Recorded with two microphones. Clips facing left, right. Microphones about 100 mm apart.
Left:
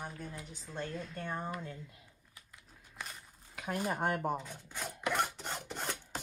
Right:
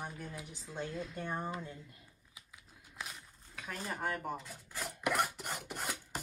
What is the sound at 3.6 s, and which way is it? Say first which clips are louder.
Dishes: left 7 dB; 15° left (ahead or behind).